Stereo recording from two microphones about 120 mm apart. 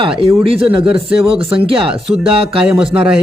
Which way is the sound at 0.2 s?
50° right (ahead or behind).